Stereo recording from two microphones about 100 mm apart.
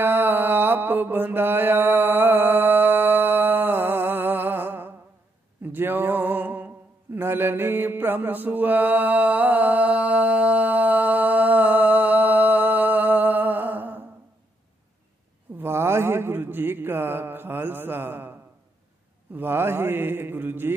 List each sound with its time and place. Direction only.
0.0 s mantra: 20° right (ahead or behind)
5.6 s a sound: 20° right (ahead or behind)
15.5 s speech: 25° right (ahead or behind)
19.3 s speech: 25° right (ahead or behind)